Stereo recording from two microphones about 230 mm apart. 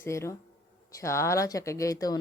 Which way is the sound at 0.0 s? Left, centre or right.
Centre.